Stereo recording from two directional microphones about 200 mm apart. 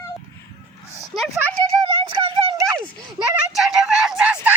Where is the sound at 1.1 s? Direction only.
Centre (ahead or behind).